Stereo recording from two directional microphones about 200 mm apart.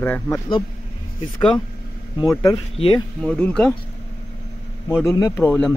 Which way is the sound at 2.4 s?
25° left (ahead or behind).